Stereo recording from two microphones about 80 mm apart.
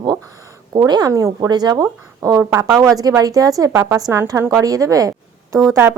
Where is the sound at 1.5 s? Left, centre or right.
Right.